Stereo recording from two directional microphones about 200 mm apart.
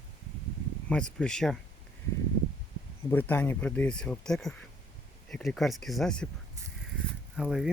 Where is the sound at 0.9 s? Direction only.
5° left (ahead or behind).